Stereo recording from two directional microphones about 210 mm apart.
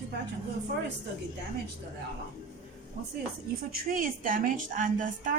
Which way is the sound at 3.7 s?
40° right (ahead or behind).